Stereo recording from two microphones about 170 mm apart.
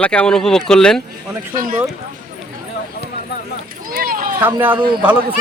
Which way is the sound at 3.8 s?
55° right (ahead or behind).